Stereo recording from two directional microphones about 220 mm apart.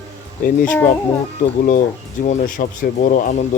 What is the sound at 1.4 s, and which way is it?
Speech, 35° left (ahead or behind).